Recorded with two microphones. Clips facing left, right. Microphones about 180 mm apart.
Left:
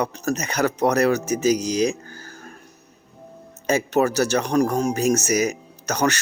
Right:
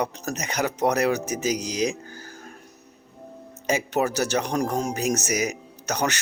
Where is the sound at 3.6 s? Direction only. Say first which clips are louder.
Left 4 dB; 15° right (ahead or behind).